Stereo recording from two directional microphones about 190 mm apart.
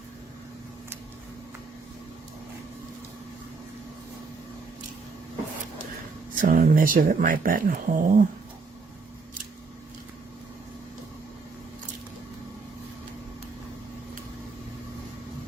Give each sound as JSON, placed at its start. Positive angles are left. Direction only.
{"t": 6.3, "sound": "speech", "side_deg": -45}